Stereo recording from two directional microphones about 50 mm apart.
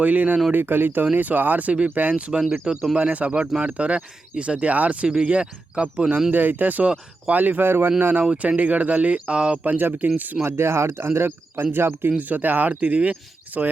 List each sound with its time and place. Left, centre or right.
0.0 s speech: right
0.5 s speech: right
2.1 s speech: right
2.4 s speech: centre
3.0 s speech: right
6.3 s speech: right
9.6 s speech: right
10.4 s speech: right
12.1 s speech: right